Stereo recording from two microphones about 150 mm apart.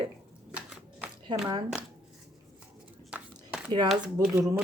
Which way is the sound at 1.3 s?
30° right (ahead or behind).